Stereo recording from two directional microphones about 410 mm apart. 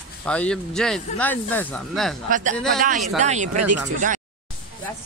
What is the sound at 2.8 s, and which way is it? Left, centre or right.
Speech, centre.